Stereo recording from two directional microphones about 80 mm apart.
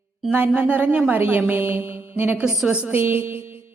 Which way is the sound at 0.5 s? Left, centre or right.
Right.